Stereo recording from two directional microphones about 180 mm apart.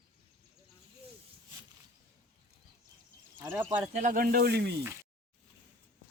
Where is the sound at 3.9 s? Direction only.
45° right (ahead or behind); by 4.7 s 65° right (ahead or behind).